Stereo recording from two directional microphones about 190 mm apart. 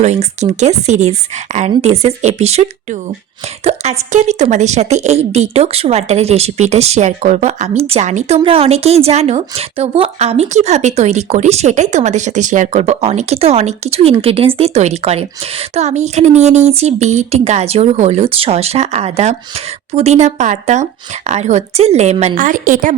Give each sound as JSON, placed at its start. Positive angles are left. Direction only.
{"t": 0.0, "sound": "a woman's voice", "side_deg": -35}